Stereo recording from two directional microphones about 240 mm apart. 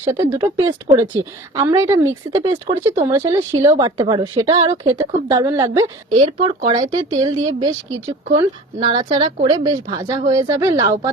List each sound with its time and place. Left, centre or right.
0.0 s speech: centre
8.4 s speech: right